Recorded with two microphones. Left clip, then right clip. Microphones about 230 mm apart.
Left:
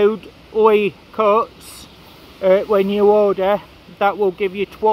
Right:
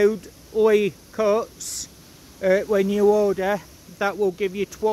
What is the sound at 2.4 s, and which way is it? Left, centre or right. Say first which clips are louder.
Speech: left 5 dB; centre.